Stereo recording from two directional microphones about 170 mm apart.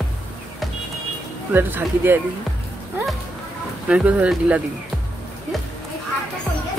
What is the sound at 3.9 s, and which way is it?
Speech, 5° right (ahead or behind).